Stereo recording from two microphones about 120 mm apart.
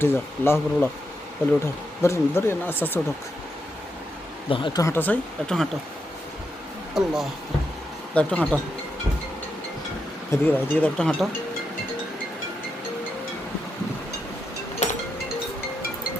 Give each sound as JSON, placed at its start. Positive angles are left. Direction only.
{"t": 0.0, "sound": "speech", "side_deg": 20}
{"t": 4.4, "sound": "speech", "side_deg": 45}
{"t": 4.8, "sound": "speech", "side_deg": 20}
{"t": 6.9, "sound": "speech", "side_deg": -5}
{"t": 8.1, "sound": "speech", "side_deg": 10}
{"t": 10.3, "sound": "speech", "side_deg": 15}
{"t": 14.8, "sound": "music", "side_deg": 80}